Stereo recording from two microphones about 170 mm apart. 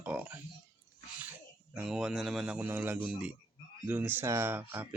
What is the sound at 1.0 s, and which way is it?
Sneeze, 10° right (ahead or behind).